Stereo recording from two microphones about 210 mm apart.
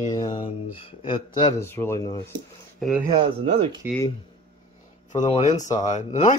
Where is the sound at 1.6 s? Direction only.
10° left (ahead or behind).